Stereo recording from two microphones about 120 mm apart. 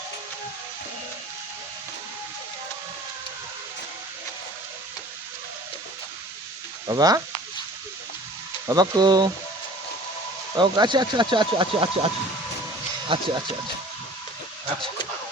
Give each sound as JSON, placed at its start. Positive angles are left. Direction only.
{"t": 6.8, "sound": "speech", "side_deg": -30}
{"t": 8.6, "sound": "speech", "side_deg": -35}
{"t": 10.6, "sound": "speech", "side_deg": -40}